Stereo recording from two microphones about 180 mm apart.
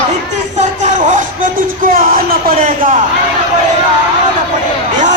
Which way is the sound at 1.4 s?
55° right (ahead or behind).